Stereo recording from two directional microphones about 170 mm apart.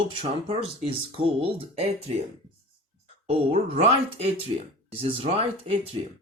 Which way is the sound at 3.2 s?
40° right (ahead or behind).